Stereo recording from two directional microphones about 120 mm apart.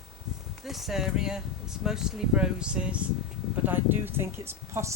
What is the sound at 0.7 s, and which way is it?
Speech, centre (ahead or behind).